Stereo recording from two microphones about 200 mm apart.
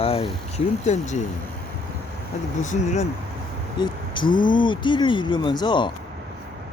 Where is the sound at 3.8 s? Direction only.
25° left (ahead or behind).